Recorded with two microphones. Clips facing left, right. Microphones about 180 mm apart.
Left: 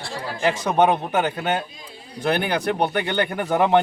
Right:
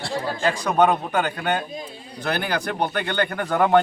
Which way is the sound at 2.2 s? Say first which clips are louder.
Left 3 dB; 20° left (ahead or behind).